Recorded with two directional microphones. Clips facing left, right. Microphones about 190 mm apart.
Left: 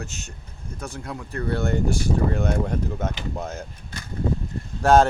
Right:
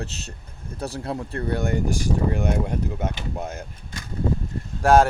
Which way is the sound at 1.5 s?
15° right (ahead or behind).